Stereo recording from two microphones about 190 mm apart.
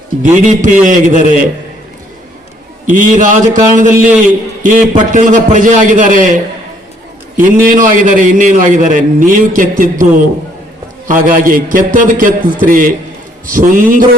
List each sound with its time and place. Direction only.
0.2 s a man's voice: 40° right (ahead or behind)
2.8 s a man's voice: 45° right (ahead or behind)